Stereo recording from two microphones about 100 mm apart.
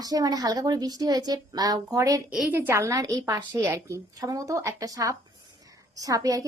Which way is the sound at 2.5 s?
25° right (ahead or behind).